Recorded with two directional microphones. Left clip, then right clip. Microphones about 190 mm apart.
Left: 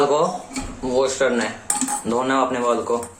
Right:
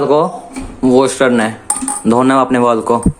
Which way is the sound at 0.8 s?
55° right (ahead or behind).